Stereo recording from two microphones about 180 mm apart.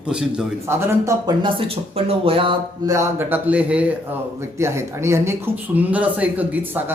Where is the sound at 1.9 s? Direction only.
35° right (ahead or behind).